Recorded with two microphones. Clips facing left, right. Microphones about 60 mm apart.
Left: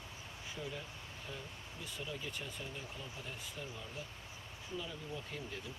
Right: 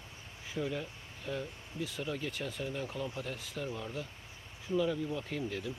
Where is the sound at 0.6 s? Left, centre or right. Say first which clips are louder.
Right 9 dB; right.